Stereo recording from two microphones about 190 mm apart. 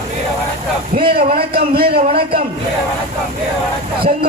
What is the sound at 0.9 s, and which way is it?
A man's voice, 55° right (ahead or behind).